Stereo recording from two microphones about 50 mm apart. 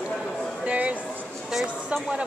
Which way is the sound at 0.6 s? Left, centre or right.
Right.